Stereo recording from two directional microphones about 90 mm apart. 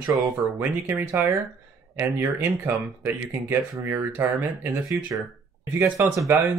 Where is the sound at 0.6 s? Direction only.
25° right (ahead or behind).